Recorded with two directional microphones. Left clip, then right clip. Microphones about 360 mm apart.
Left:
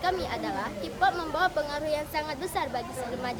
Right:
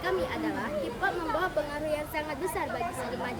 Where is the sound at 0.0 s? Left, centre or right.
Centre.